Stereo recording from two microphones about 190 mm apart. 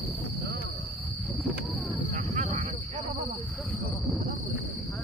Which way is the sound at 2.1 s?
35° right (ahead or behind).